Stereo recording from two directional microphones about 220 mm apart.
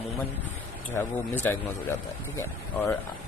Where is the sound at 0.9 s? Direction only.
10° left (ahead or behind).